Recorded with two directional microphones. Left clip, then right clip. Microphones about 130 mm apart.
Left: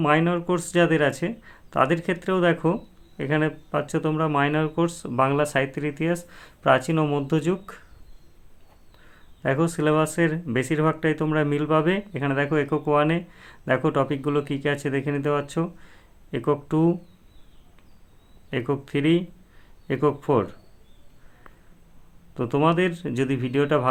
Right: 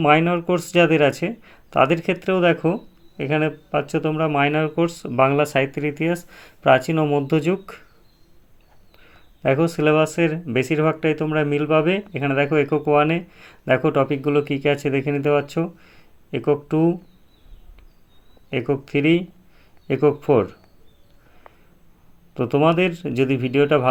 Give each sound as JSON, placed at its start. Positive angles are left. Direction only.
{"t": 0.0, "sound": "speech", "side_deg": -20}
{"t": 9.4, "sound": "speech", "side_deg": -15}
{"t": 18.5, "sound": "speech", "side_deg": -10}
{"t": 22.4, "sound": "speech", "side_deg": -15}